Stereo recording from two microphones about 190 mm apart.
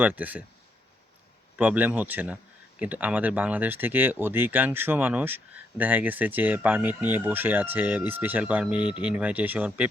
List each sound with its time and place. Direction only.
0.0 s speech: 10° right (ahead or behind)
1.5 s speech: 10° right (ahead or behind)